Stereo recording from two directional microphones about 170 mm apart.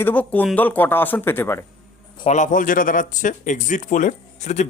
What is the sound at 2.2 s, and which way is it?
Speech, 45° left (ahead or behind).